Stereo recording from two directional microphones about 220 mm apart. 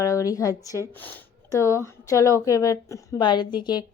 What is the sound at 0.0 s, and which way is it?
A woman's voice, 15° left (ahead or behind).